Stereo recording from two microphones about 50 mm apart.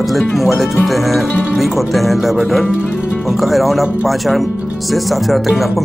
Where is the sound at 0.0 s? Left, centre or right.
Centre.